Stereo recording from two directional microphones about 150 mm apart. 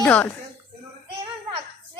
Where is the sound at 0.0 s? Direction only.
10° left (ahead or behind).